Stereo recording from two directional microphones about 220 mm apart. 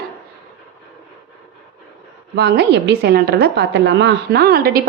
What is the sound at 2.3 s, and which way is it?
A woman's voice, 50° right (ahead or behind).